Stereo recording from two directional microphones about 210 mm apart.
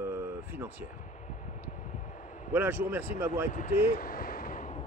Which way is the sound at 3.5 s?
40° left (ahead or behind).